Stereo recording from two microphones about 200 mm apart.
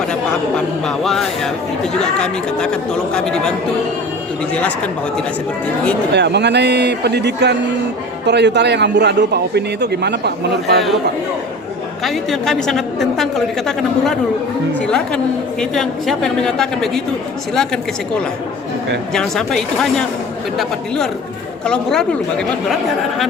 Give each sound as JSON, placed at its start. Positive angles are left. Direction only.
{"t": 0.1, "sound": "a man's voice", "side_deg": 5}
{"t": 4.5, "sound": "a man's voice", "side_deg": 5}
{"t": 6.1, "sound": "a man's voice", "side_deg": -60}
{"t": 12.0, "sound": "a man's voice", "side_deg": 0}